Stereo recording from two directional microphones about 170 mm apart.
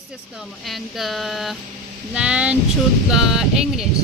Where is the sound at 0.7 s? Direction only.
Centre (ahead or behind).